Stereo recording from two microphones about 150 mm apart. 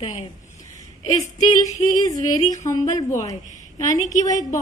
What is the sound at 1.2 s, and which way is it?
A woman's voice, 25° left (ahead or behind).